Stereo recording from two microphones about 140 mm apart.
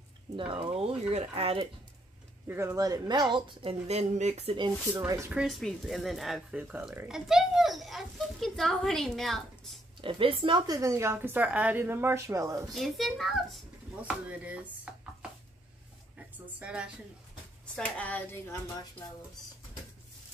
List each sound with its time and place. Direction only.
0.4 s speech: 40° right (ahead or behind)
2.4 s a woman's voice: 20° right (ahead or behind); by 3.7 s 35° right (ahead or behind)
3.8 s speech: 50° right (ahead or behind)
4.9 s a woman's voice: 25° right (ahead or behind)
5.3 s a child's voice: centre (ahead or behind)
10.0 s a woman's voice: 40° right (ahead or behind); by 12.7 s 25° right (ahead or behind)
12.7 s a child's voice: centre (ahead or behind)
16.2 s a woman's voice: 10° right (ahead or behind)
17.7 s speech: 10° left (ahead or behind)